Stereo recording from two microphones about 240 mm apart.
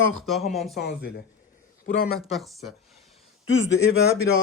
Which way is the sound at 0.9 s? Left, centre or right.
Left.